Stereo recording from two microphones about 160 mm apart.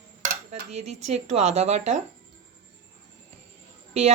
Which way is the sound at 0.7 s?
45° right (ahead or behind).